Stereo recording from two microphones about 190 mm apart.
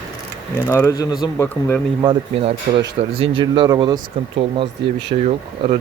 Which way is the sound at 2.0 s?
30° right (ahead or behind).